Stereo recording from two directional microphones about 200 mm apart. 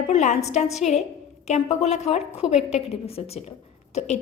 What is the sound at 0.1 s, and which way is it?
A woman's voice, 35° left (ahead or behind).